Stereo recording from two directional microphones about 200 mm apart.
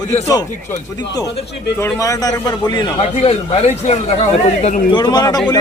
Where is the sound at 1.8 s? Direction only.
15° left (ahead or behind); by 4.0 s 35° left (ahead or behind).